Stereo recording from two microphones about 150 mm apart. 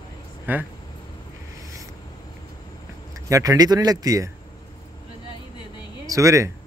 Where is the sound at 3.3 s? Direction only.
20° right (ahead or behind).